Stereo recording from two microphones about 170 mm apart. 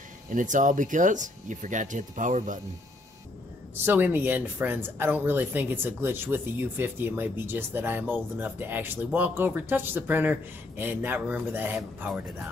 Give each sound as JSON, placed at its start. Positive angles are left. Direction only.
{"t": 0.3, "sound": "speech", "side_deg": -50}
{"t": 3.7, "sound": "speech", "side_deg": -10}